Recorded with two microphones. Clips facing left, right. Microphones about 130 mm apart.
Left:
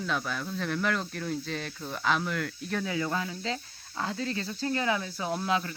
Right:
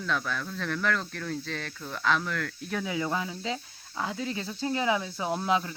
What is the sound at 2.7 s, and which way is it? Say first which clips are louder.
Speech: right 1 dB; 10° right (ahead or behind).